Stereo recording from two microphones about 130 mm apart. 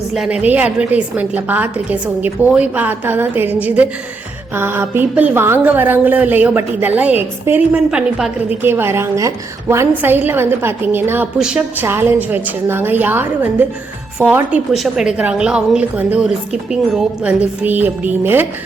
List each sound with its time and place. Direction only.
0.1 s a woman's voice: 5° right (ahead or behind)